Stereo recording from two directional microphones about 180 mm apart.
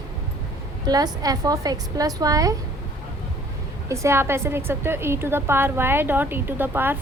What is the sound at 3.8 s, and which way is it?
A woman's voice, 15° right (ahead or behind).